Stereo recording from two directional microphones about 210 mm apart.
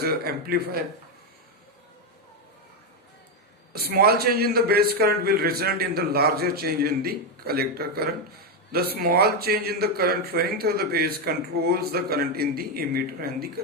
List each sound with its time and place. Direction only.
0.0 s a man's voice: 45° right (ahead or behind)
3.7 s a man's voice: 50° right (ahead or behind)